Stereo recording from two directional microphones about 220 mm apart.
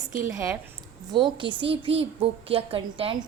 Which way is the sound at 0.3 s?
10° right (ahead or behind).